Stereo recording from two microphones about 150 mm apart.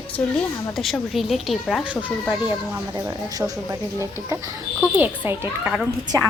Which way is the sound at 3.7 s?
20° right (ahead or behind).